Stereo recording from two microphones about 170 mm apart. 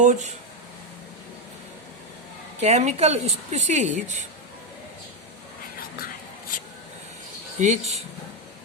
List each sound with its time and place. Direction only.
0.0 s speech: 45° right (ahead or behind)
2.6 s a woman's voice: 40° right (ahead or behind)
7.6 s speech: 40° right (ahead or behind)